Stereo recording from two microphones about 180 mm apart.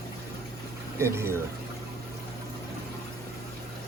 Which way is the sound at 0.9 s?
15° right (ahead or behind).